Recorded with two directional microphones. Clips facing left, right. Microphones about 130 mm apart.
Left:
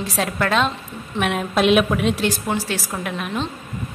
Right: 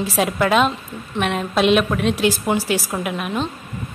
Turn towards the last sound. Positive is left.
turn(degrees=-5)  # may be behind; listen again after turning